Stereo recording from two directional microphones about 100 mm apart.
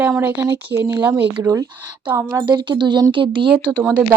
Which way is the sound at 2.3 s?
45° right (ahead or behind).